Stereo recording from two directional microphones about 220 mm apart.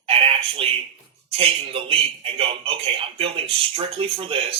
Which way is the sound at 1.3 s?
25° right (ahead or behind).